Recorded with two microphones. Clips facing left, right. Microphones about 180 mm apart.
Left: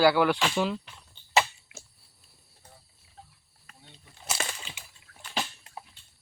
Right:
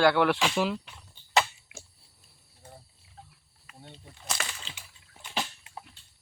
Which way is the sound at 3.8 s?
45° right (ahead or behind).